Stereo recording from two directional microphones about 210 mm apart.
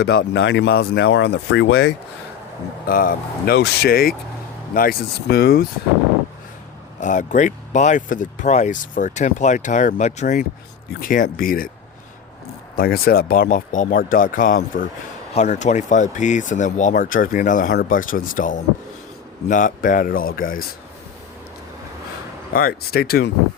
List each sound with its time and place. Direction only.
0.0 s speech: 50° left (ahead or behind)
2.8 s speech: 45° left (ahead or behind)
7.0 s speech: 35° left (ahead or behind)
12.7 s speech: 45° left (ahead or behind)
22.5 s speech: 45° left (ahead or behind)